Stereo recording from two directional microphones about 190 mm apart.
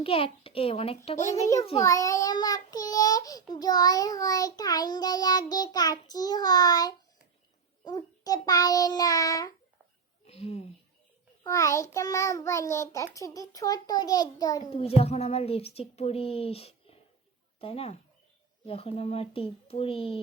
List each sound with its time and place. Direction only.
0.0 s speech: 30° left (ahead or behind)
1.3 s a child's voice: 15° left (ahead or behind)
1.8 s child singing: 15° left (ahead or behind)
10.2 s speech: 35° left (ahead or behind)
11.4 s a child's voice: 15° left (ahead or behind)
13.1 s child singing: 15° left (ahead or behind)
14.7 s speech: 30° left (ahead or behind)
18.6 s child singing: 30° left (ahead or behind)